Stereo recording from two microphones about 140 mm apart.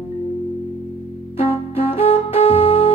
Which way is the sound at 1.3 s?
45° left (ahead or behind).